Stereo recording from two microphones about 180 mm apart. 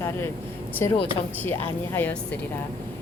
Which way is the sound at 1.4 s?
10° left (ahead or behind).